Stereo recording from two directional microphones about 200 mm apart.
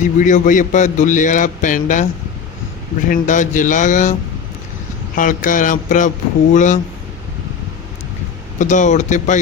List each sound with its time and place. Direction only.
0.0 s a man's voice: 40° left (ahead or behind)
3.1 s a man's voice: 40° left (ahead or behind)
5.1 s a man's voice: 40° left (ahead or behind)
8.5 s a man's voice: 40° left (ahead or behind)